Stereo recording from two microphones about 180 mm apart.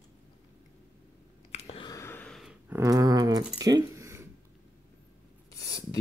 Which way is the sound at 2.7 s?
20° right (ahead or behind).